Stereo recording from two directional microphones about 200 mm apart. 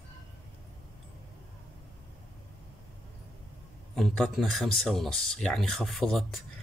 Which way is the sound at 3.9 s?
Centre (ahead or behind).